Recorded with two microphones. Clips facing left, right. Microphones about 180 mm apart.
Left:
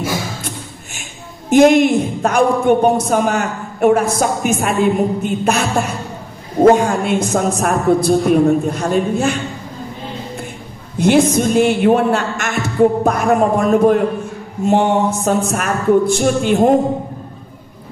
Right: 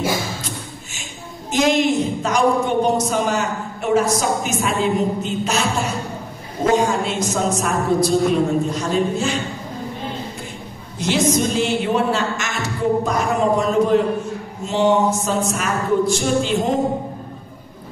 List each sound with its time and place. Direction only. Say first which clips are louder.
1.5 s a woman's voice: left 8 dB; 55° left (ahead or behind)
11.0 s a woman's voice: left 6 dB; 55° left (ahead or behind)